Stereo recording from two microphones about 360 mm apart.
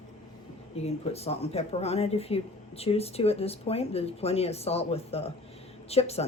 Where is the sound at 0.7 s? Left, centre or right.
Centre.